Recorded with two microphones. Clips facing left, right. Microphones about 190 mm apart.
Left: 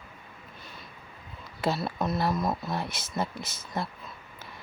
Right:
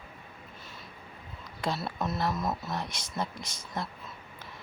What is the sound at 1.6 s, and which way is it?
Speech, centre (ahead or behind).